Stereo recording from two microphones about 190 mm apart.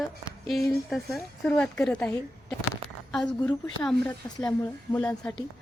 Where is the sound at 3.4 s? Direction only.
5° left (ahead or behind).